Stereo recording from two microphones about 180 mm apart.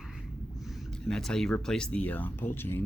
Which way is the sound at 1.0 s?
5° left (ahead or behind).